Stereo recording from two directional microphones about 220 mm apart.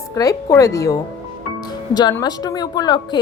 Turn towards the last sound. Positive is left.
turn(degrees=20)  # may be behind; listen again after turning